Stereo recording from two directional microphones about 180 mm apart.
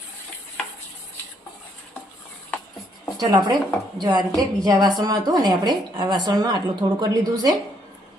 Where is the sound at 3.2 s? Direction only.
20° right (ahead or behind).